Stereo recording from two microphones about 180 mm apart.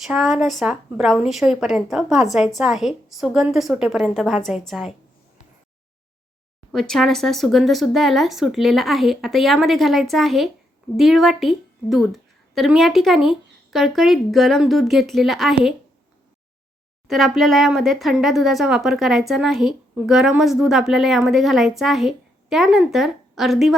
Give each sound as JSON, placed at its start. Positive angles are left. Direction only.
{"t": 0.0, "sound": "speech", "side_deg": 0}
{"t": 6.7, "sound": "a woman's voice", "side_deg": 0}
{"t": 17.1, "sound": "speech", "side_deg": 0}